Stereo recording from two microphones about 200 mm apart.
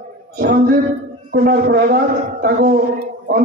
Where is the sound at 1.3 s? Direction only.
50° right (ahead or behind).